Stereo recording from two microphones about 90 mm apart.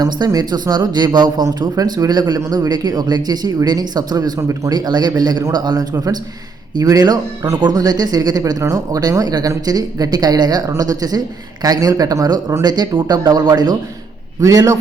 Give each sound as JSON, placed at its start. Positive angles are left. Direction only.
{"t": 0.0, "sound": "a man's voice", "side_deg": -45}
{"t": 14.4, "sound": "a man's voice", "side_deg": -40}